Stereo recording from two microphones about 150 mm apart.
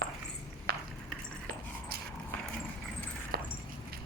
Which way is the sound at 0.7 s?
90° right.